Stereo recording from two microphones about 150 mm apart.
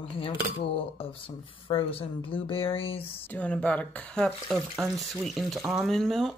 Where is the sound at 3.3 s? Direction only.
10° left (ahead or behind).